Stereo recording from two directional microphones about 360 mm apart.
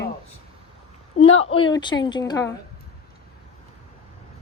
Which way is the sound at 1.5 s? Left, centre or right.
Centre.